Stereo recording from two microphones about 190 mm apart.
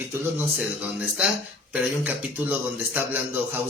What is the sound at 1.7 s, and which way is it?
A man's voice, 10° right (ahead or behind).